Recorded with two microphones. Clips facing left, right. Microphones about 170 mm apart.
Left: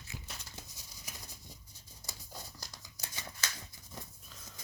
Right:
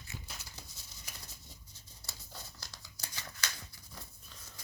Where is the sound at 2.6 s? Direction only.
20° left (ahead or behind).